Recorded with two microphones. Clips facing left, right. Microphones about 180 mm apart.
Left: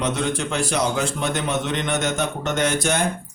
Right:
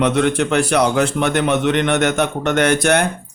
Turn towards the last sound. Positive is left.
turn(degrees=-65)  # may be behind; listen again after turning